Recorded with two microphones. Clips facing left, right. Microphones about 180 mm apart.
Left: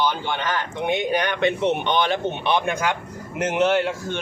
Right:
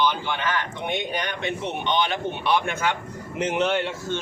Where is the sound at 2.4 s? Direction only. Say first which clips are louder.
Right 1 dB; 20° left (ahead or behind).